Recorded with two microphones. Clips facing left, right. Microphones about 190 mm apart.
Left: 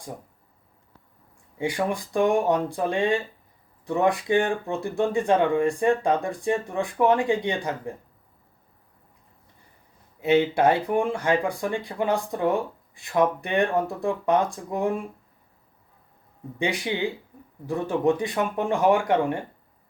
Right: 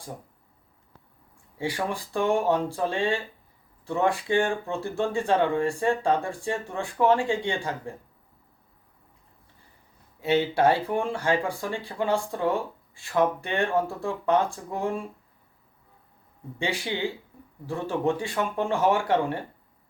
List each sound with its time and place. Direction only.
1.5 s speech: 15° left (ahead or behind)
10.2 s speech: 15° left (ahead or behind)
16.6 s speech: 15° left (ahead or behind)